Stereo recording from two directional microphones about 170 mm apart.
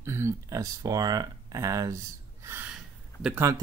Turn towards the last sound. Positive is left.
turn(degrees=-15)  # may be behind; listen again after turning